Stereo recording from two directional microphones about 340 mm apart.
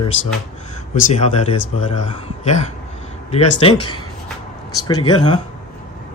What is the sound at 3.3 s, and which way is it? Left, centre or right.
Speech, centre.